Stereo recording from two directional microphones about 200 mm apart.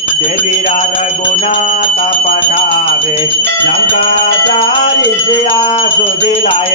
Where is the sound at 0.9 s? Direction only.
35° left (ahead or behind).